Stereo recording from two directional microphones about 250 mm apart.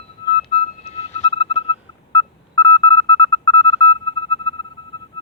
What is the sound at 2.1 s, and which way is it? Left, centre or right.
Telephone dialing, left.